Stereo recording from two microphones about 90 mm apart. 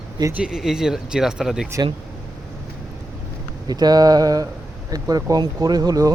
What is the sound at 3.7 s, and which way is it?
Speech, 45° right (ahead or behind).